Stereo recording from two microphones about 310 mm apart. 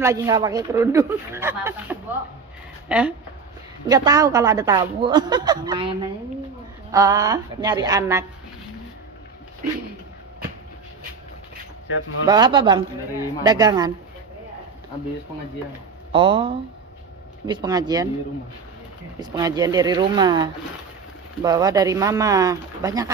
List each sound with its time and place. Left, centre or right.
0.0 s a woman's voice: centre
12.3 s a woman's voice: centre
16.1 s a woman's voice: centre
19.1 s a woman's voice: centre